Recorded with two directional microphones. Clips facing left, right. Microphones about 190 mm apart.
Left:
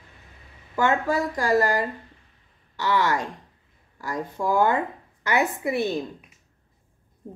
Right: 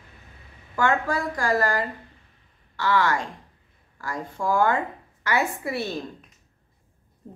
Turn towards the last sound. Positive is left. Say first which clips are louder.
# left 4 dB
turn(degrees=15)  # may be behind; listen again after turning